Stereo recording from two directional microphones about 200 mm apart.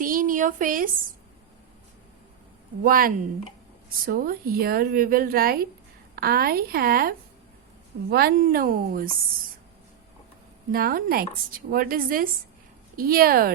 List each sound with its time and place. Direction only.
0.0 s a sound: 45° right (ahead or behind)
2.8 s speech: 45° right (ahead or behind)
10.7 s speech: 45° right (ahead or behind)